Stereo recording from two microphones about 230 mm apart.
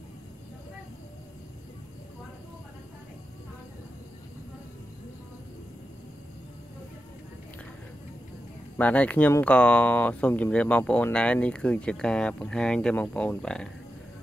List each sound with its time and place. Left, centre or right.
8.7 s speech: centre